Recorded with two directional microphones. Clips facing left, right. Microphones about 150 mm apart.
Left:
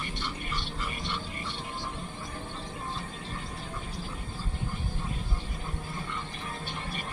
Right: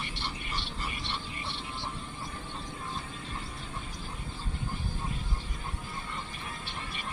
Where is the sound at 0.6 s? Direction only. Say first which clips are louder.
Left 2 dB; 45° left (ahead or behind).